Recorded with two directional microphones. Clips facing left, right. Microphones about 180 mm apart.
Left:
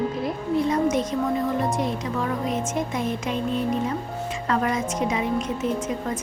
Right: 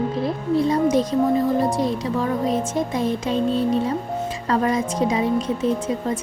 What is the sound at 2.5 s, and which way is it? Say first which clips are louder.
A woman's voice: right 4 dB; 35° right (ahead or behind).